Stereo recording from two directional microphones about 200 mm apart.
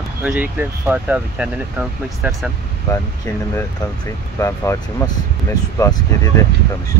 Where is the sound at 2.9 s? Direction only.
15° left (ahead or behind).